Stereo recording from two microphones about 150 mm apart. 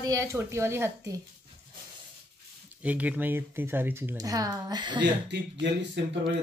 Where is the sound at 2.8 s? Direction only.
10° right (ahead or behind).